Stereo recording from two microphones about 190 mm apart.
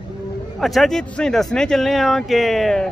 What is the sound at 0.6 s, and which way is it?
Speech, centre (ahead or behind).